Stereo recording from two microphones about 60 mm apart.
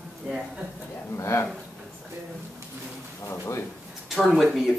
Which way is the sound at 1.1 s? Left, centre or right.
Left.